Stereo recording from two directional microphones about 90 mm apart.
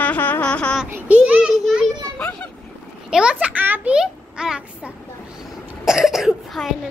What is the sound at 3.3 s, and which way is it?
A child's voice, 20° right (ahead or behind).